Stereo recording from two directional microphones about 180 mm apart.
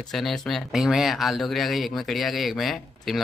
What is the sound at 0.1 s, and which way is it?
Speech, centre (ahead or behind).